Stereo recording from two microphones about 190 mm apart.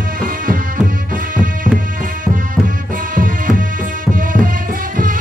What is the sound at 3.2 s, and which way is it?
Music, 45° right (ahead or behind).